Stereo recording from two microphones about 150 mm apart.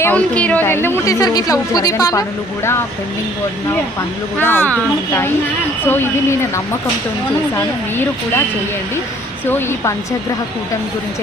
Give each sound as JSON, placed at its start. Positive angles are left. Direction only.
{"t": 0.0, "sound": "a woman's voice", "side_deg": 10}
{"t": 4.4, "sound": "speech", "side_deg": 15}
{"t": 5.8, "sound": "speech", "side_deg": 15}